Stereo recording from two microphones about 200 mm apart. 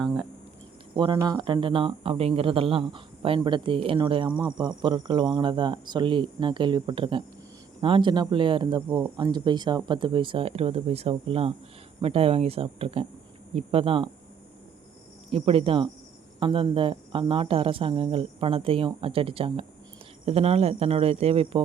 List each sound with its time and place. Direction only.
0.9 s speech: 25° right (ahead or behind)
8.9 s speech: 10° right (ahead or behind)
9.1 s speech: 20° right (ahead or behind)
15.3 s speech: 30° right (ahead or behind)